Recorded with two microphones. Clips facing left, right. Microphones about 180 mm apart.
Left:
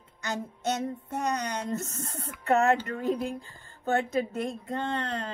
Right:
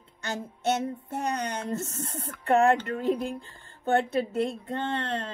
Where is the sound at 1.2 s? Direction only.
30° right (ahead or behind).